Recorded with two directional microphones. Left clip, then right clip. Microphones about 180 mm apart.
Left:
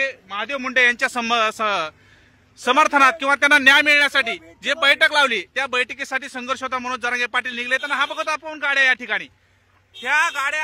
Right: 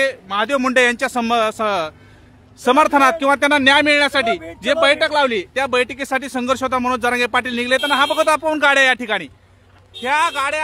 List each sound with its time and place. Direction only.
0.0 s speech: 25° right (ahead or behind)
0.9 s speech: 10° right (ahead or behind)
8.2 s speech: 15° right (ahead or behind)
10.0 s speech: centre (ahead or behind)